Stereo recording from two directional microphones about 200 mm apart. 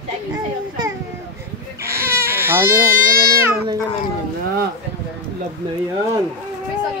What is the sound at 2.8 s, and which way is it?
Baby cry, 45° right (ahead or behind).